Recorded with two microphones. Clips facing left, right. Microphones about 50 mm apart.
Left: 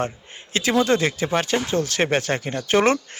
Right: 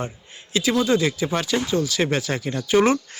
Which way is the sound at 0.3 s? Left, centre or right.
Left.